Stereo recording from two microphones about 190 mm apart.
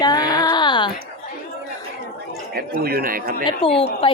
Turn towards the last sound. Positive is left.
turn(degrees=30)  # may be behind; listen again after turning